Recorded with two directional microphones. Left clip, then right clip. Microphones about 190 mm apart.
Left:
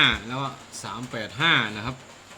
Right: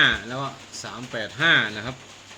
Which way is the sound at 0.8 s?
40° left (ahead or behind).